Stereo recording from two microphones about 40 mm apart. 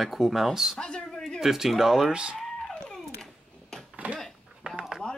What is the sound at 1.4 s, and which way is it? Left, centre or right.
Speech, centre.